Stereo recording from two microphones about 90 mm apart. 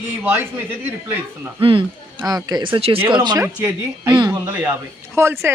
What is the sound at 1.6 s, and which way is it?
Speech, 75° right (ahead or behind).